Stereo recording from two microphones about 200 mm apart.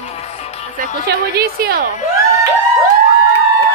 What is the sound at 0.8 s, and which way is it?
A woman's voice, 50° right (ahead or behind).